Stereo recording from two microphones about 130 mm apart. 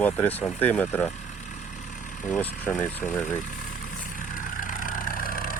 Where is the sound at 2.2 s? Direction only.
15° left (ahead or behind).